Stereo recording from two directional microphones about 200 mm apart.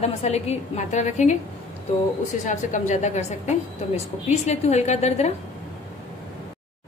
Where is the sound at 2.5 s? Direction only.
35° left (ahead or behind).